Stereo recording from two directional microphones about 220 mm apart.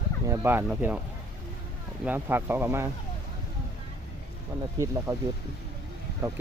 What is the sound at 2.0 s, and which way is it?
Speech, 10° right (ahead or behind).